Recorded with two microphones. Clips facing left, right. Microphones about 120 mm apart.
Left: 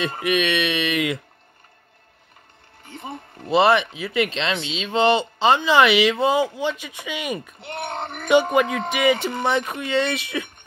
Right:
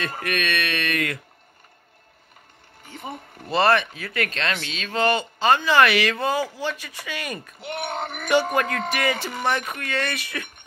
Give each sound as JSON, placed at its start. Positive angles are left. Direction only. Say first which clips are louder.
{"t": 0.2, "sound": "speech", "louder": "left 6 dB", "side_deg": 20}
{"t": 3.4, "sound": "speech", "louder": "left 3 dB", "side_deg": 20}
{"t": 7.6, "sound": "speech", "louder": "right 4 dB", "side_deg": -5}
{"t": 8.3, "sound": "speech", "louder": "left 4 dB", "side_deg": 20}